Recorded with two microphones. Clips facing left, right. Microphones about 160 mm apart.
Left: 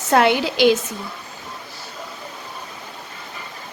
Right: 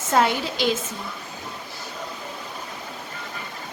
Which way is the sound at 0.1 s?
75° left (ahead or behind).